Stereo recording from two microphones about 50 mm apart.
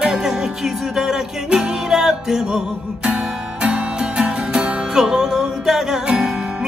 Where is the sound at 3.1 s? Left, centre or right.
Right.